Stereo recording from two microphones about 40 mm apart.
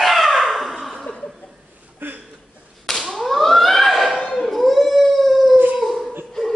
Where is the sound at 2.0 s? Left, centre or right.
Right.